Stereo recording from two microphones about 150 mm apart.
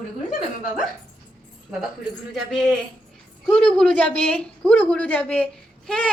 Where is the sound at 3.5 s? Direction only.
5° left (ahead or behind).